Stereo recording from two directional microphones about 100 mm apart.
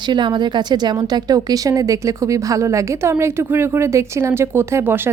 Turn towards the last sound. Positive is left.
turn(degrees=-20)  # may be behind; listen again after turning